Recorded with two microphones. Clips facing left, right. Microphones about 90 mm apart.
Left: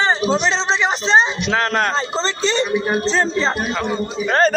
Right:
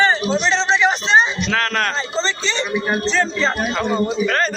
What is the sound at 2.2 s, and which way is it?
Speech, 40° left (ahead or behind).